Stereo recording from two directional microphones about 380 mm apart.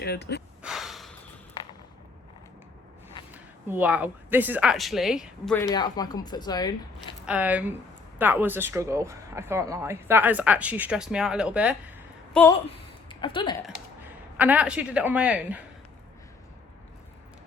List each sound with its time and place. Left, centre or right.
0.0 s speech: left
0.6 s snort: centre
3.3 s speech: centre
7.3 s speech: centre
13.7 s speech: centre